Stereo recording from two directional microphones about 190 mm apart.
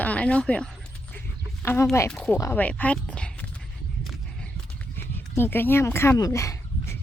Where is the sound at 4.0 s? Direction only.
5° left (ahead or behind).